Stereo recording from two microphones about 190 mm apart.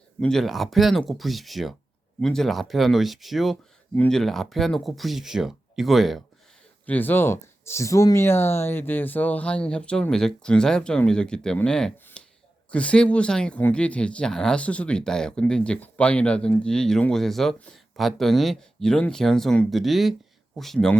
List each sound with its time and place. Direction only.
0.2 s speech: 5° left (ahead or behind)